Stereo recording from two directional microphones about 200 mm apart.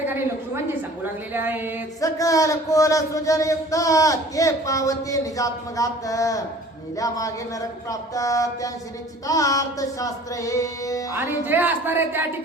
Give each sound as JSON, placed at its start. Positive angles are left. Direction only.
{"t": 1.3, "sound": "speech", "side_deg": -10}
{"t": 2.0, "sound": "speech", "side_deg": 15}
{"t": 11.1, "sound": "speech", "side_deg": -10}